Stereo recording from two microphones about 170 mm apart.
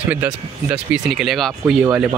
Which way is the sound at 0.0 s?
10° right (ahead or behind).